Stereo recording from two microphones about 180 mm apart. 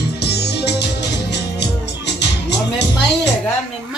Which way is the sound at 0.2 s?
65° left (ahead or behind).